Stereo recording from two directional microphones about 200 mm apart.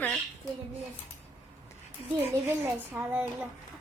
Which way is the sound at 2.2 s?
10° right (ahead or behind).